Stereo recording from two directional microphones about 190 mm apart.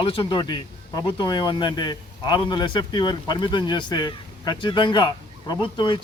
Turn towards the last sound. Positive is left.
turn(degrees=25)  # may be behind; listen again after turning